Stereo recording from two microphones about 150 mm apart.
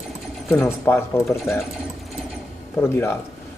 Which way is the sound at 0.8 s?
15° left (ahead or behind).